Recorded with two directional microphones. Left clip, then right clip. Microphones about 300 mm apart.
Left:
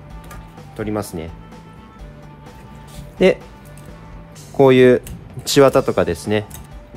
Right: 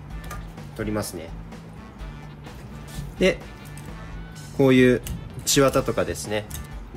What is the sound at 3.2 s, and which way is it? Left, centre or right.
Speech, left.